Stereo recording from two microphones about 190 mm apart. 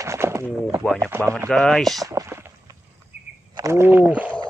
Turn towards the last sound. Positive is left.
turn(degrees=-10)  # may be behind; listen again after turning